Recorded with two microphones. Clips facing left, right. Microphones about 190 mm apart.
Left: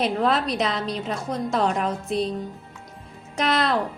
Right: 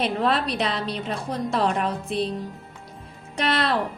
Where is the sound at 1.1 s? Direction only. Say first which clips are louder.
Left 1 dB; 30° right (ahead or behind).